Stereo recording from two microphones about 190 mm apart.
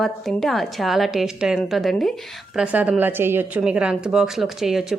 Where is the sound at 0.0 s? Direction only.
Centre (ahead or behind).